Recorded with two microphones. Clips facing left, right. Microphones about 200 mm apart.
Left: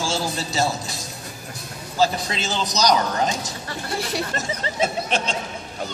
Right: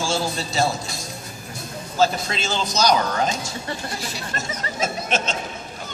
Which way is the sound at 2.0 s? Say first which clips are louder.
Right 1 dB; 15° left (ahead or behind).